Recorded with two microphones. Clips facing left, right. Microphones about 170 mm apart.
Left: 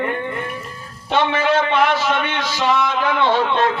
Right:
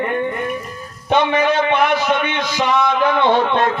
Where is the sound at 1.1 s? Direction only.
15° right (ahead or behind).